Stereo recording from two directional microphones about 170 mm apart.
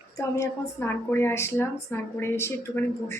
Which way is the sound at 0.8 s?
15° left (ahead or behind).